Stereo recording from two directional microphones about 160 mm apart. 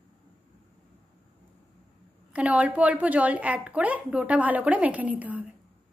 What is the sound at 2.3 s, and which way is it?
A woman's voice, 10° right (ahead or behind).